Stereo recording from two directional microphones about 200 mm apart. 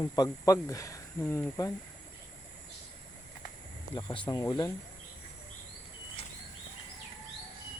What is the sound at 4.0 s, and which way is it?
Speech, 20° left (ahead or behind).